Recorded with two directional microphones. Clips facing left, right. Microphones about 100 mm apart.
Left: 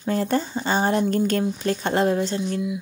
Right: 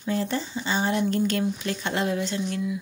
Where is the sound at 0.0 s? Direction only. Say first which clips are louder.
Left 4 dB; 45° left (ahead or behind).